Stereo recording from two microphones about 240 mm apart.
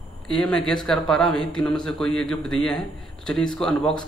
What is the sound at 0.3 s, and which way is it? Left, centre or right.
A man's voice, centre.